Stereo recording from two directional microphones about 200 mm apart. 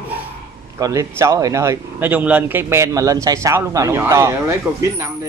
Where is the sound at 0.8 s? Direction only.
15° right (ahead or behind).